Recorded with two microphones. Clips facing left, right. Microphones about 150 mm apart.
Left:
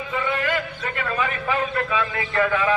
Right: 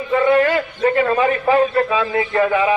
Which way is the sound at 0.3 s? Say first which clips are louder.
Right 10 dB; 40° right (ahead or behind).